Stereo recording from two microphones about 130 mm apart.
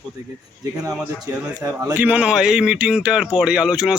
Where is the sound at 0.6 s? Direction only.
25° right (ahead or behind).